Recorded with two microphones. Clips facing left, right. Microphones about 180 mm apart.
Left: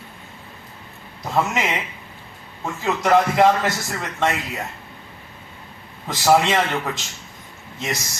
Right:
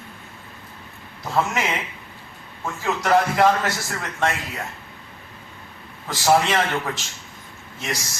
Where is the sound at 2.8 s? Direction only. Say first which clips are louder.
Left 2 dB; 20° left (ahead or behind).